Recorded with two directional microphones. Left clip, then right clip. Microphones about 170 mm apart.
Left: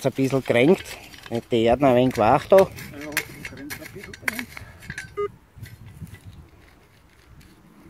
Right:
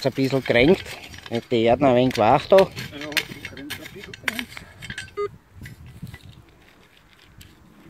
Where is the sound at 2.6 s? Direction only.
5° right (ahead or behind).